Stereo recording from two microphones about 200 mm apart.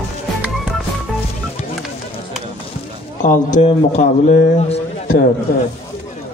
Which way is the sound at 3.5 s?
35° left (ahead or behind).